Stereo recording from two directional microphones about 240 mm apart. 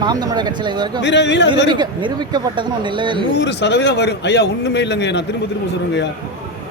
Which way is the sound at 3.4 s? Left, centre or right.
Left.